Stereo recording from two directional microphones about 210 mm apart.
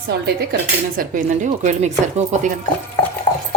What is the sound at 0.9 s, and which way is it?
Speech, 40° right (ahead or behind).